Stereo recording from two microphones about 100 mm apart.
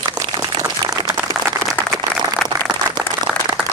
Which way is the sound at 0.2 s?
40° right (ahead or behind).